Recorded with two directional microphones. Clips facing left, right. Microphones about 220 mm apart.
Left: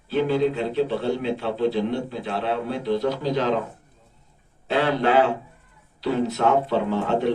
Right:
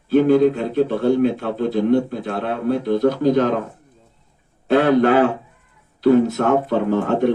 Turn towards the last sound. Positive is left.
turn(degrees=-50)  # may be behind; listen again after turning